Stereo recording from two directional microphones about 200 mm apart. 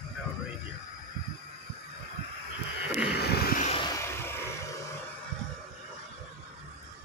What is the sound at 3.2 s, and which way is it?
Vehicle, 50° left (ahead or behind).